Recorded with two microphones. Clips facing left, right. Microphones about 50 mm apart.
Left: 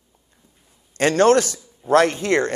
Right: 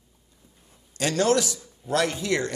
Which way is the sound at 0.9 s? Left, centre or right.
Left.